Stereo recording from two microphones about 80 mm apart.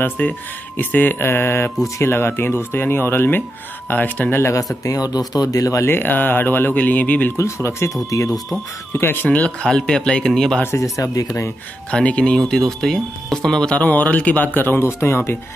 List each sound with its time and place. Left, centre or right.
0.0 s speech: left
4.8 s speech: left
5.9 s speech: left
7.3 s speech: left
9.0 s speech: left; by 10.6 s centre
10.6 s speech: left
11.9 s speech: centre; by 15.3 s left